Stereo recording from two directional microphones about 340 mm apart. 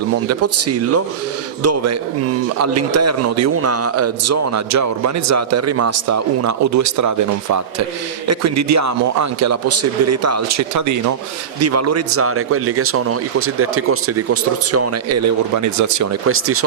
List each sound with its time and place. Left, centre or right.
0.3 s a man's voice: right
16.2 s speech: right